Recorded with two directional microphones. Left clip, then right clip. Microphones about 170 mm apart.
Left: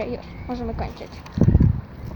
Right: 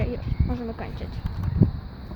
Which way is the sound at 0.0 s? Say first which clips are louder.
Left 2 dB; 15° right (ahead or behind).